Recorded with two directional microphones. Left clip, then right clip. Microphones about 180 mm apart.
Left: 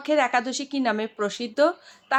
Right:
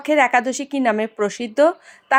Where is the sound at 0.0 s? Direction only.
30° right (ahead or behind).